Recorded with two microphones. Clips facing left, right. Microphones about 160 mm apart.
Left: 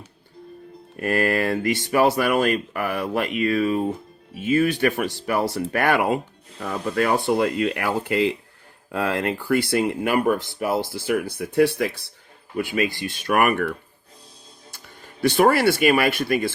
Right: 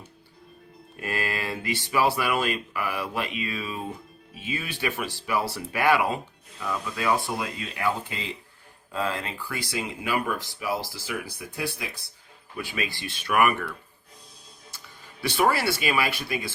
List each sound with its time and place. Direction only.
0.9 s speech: 50° left (ahead or behind)
6.9 s speech: 65° left (ahead or behind)
12.5 s speech: 50° left (ahead or behind)
15.3 s speech: 50° left (ahead or behind)